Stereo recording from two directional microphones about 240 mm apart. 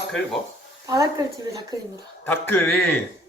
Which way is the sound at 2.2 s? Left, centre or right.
Centre.